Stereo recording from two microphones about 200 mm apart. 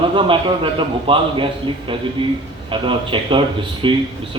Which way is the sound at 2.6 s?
25° right (ahead or behind).